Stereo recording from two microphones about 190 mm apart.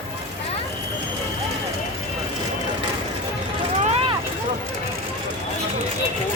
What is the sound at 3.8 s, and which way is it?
Vehicle, 35° right (ahead or behind).